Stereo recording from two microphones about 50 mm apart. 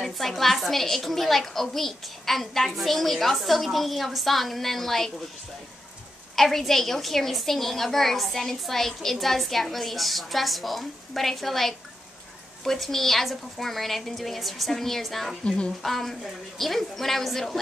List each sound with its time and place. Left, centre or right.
0.0 s a woman's voice: centre
6.3 s a woman's voice: centre
15.4 s speech: centre
15.8 s a woman's voice: centre